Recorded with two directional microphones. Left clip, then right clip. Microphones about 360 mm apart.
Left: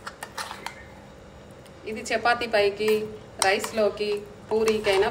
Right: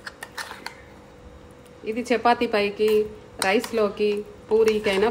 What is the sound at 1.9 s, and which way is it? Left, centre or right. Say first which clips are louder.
A woman's voice: right 3 dB; centre.